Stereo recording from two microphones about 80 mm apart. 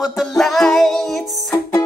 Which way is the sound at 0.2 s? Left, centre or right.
Centre.